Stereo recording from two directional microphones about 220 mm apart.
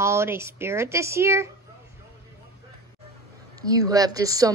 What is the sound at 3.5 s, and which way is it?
Speech, 15° right (ahead or behind).